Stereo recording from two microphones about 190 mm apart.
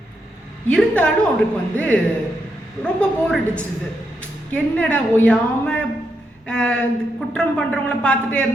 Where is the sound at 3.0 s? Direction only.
5° left (ahead or behind).